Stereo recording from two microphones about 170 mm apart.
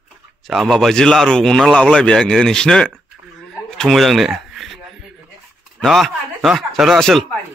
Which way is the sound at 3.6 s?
Centre (ahead or behind).